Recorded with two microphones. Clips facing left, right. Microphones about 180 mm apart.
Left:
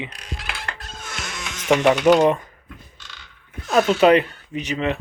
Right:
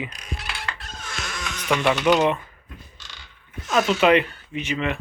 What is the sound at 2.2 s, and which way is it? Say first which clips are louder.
Speech: left 4 dB; 45° left (ahead or behind).